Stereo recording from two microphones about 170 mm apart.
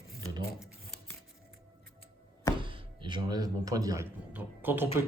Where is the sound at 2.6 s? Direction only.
30° right (ahead or behind).